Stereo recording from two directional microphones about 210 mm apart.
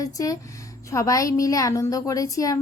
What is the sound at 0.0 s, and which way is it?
A woman's voice, 15° left (ahead or behind).